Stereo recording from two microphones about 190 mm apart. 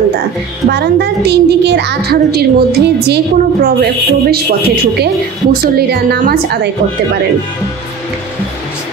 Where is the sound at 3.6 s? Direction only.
55° right (ahead or behind).